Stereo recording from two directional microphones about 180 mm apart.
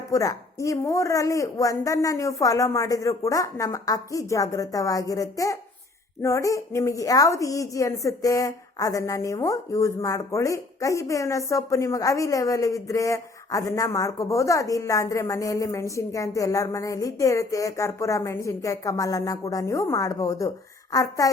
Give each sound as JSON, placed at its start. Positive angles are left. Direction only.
{"t": 0.1, "sound": "a woman's voice", "side_deg": 20}